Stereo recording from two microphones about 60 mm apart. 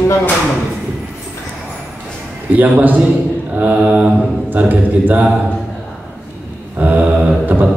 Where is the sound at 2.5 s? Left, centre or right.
Right.